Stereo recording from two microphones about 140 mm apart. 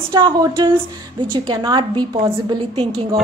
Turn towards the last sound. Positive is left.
turn(degrees=-30)  # may be behind; listen again after turning